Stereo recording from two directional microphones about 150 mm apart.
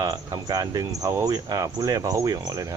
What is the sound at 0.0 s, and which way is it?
Speech, 25° right (ahead or behind).